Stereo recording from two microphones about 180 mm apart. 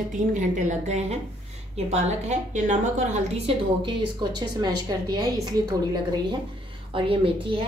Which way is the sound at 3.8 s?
25° right (ahead or behind).